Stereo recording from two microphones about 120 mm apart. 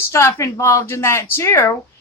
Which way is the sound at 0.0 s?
20° left (ahead or behind).